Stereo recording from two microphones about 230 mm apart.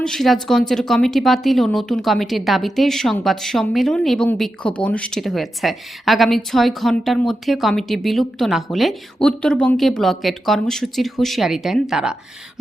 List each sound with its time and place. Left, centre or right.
0.0 s speech: centre